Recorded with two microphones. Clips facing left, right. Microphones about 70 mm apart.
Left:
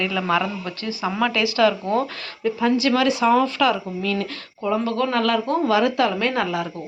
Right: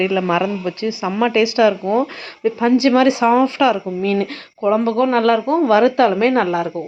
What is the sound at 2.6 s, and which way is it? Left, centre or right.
Speech, right.